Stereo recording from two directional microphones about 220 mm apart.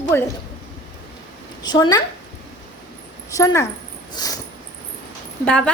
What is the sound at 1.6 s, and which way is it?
Speech, 20° left (ahead or behind).